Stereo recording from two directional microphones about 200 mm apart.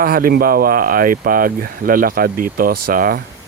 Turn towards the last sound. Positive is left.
turn(degrees=-45)  # may be behind; listen again after turning